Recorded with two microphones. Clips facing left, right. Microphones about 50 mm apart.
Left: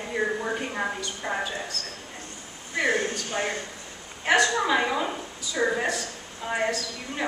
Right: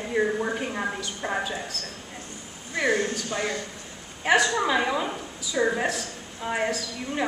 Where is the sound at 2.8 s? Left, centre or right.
Left.